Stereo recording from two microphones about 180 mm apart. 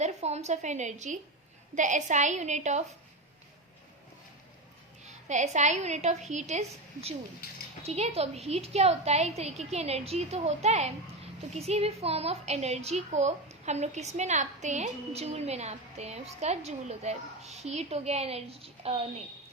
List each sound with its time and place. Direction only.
0.0 s a woman's voice: 35° right (ahead or behind)
5.0 s a woman's voice: 40° right (ahead or behind)
7.4 s speech: 60° left (ahead or behind)
7.9 s a woman's voice: 35° right (ahead or behind)